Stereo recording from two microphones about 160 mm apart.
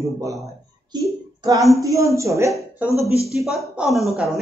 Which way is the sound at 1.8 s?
20° right (ahead or behind).